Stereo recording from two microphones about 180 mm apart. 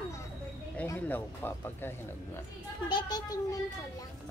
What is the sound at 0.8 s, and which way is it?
Speech, 10° left (ahead or behind).